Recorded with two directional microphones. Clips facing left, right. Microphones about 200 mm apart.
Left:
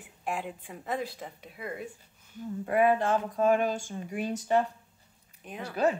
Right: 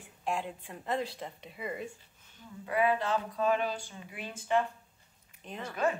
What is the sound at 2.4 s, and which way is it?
Speech, 50° left (ahead or behind).